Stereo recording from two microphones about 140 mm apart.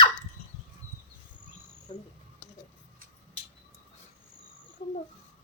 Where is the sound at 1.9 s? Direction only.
30° left (ahead or behind).